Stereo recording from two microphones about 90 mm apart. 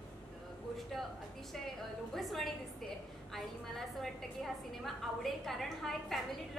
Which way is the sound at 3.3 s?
5° left (ahead or behind).